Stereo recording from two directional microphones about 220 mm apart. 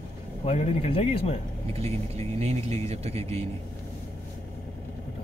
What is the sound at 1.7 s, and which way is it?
Speech, 30° right (ahead or behind).